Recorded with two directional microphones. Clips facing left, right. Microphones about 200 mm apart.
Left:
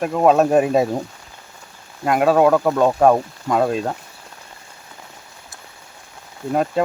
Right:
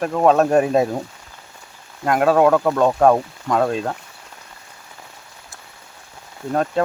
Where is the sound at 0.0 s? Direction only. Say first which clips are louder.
Left 1 dB; 5° left (ahead or behind).